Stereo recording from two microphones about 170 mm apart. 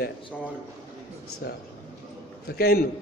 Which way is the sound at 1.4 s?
70° left (ahead or behind).